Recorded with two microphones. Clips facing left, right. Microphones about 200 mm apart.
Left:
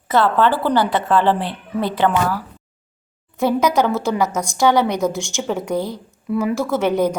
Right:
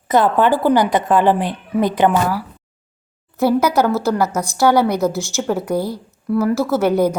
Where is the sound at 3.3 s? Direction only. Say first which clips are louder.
Right 2 dB; 5° right (ahead or behind).